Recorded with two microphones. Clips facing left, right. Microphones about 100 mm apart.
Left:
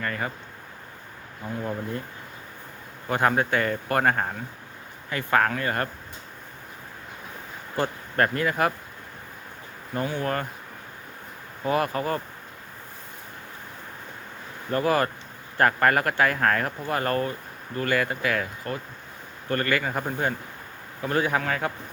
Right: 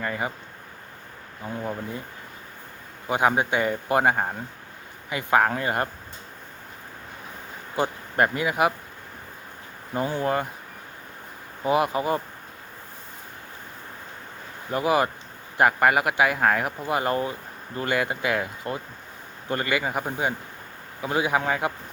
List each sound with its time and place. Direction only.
0.0 s speech: 15° right (ahead or behind)
1.5 s speech: 10° right (ahead or behind)
3.1 s speech: 15° right (ahead or behind)
7.8 s speech: 15° right (ahead or behind)
10.2 s speech: 15° right (ahead or behind)
11.6 s speech: 15° right (ahead or behind)
14.7 s speech: 15° right (ahead or behind)